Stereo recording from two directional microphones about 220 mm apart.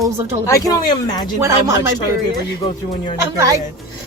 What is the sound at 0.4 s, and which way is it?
Speech, 15° left (ahead or behind).